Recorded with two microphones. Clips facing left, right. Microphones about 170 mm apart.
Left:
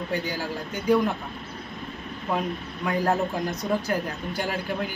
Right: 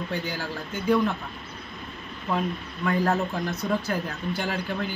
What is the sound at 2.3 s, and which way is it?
Speech, 20° left (ahead or behind).